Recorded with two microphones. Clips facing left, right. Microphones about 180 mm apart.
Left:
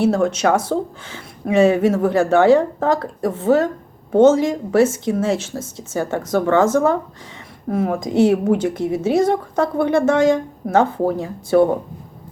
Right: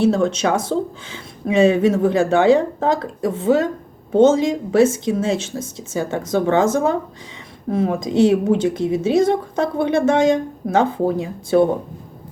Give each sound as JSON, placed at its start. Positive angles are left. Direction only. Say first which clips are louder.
{"t": 0.0, "sound": "speech", "louder": "even", "side_deg": -20}